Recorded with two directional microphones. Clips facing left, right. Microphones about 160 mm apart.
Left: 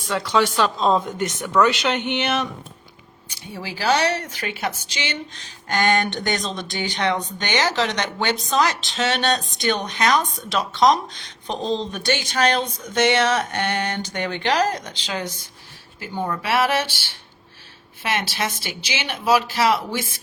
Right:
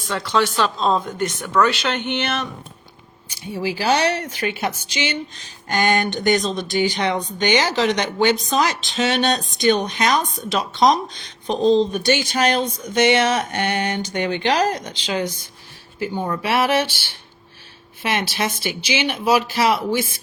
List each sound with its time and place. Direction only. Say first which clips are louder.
0.1 s speech: even; 10° left (ahead or behind)
3.6 s speech: right 2 dB; 15° right (ahead or behind)
5.6 s speech: right 1 dB; 10° right (ahead or behind)
18.0 s speech: right 2 dB; 20° right (ahead or behind)